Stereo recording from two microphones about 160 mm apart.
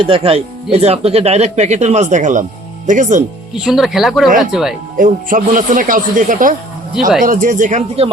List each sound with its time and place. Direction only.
0.0 s speech: 35° right (ahead or behind); by 3.2 s 50° right (ahead or behind)
3.6 s speech: centre (ahead or behind)
4.9 s speech: 55° right (ahead or behind)